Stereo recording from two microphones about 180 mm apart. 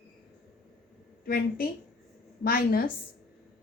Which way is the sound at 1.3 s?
55° left (ahead or behind).